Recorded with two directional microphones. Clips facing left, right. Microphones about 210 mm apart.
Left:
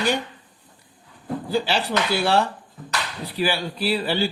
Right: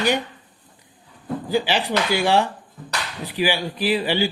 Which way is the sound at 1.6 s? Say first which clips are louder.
Right 1 dB; 15° right (ahead or behind).